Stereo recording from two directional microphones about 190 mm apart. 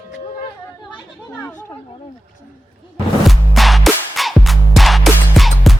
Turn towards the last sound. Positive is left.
turn(degrees=0)  # may be behind; listen again after turning